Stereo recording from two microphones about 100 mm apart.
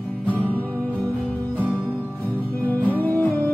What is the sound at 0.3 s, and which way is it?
Music, 15° left (ahead or behind).